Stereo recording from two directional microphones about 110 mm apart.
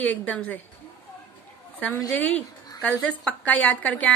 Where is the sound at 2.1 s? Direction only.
5° left (ahead or behind).